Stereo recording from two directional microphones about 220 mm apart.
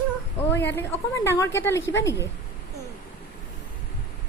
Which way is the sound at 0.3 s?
10° left (ahead or behind).